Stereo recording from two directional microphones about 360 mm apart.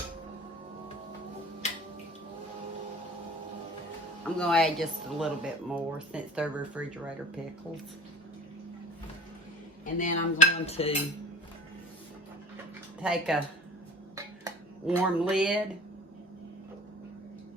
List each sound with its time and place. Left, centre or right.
4.4 s speech: centre
9.8 s cutlery: left
13.0 s speech: centre
14.4 s speech: centre